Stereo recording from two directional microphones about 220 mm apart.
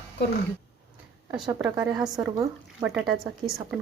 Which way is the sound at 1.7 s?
15° right (ahead or behind).